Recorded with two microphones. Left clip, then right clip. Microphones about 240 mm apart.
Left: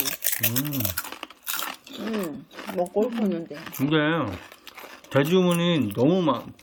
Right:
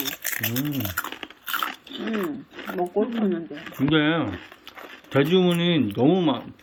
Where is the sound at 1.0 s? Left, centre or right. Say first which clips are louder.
Right 3 dB; centre.